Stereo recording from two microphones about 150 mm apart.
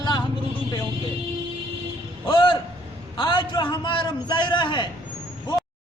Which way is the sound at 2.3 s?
35° left (ahead or behind).